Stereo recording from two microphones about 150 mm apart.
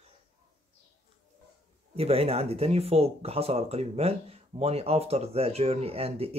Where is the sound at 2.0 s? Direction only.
40° right (ahead or behind).